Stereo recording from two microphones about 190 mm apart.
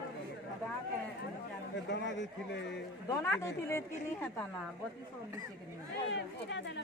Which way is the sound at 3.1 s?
15° left (ahead or behind).